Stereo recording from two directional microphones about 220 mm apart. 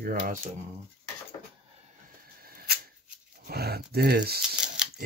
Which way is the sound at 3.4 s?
45° right (ahead or behind).